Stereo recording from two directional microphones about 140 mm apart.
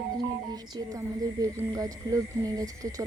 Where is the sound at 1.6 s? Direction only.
25° right (ahead or behind).